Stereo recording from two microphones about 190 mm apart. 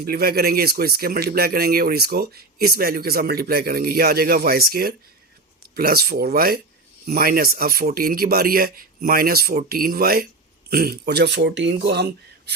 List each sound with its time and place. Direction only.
0.0 s speech: 55° right (ahead or behind)